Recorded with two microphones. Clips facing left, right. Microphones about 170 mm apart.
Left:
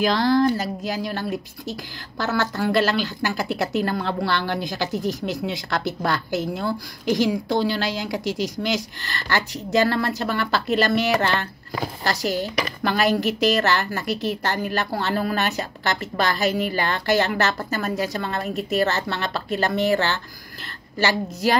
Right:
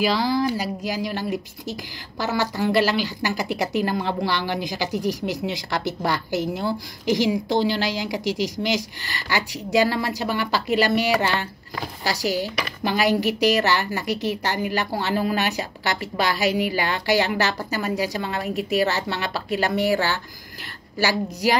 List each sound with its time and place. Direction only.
0.0 s a woman's voice: 10° right (ahead or behind)